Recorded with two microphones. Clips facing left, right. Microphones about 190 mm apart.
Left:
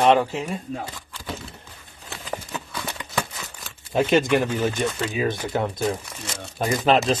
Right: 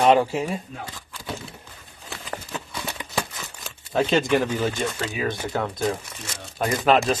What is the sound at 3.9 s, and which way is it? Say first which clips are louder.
Speech: left 1 dB; 15° left (ahead or behind).